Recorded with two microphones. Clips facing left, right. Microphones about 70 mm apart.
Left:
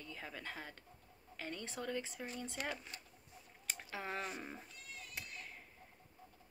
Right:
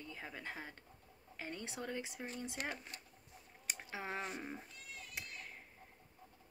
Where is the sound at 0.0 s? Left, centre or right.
Right.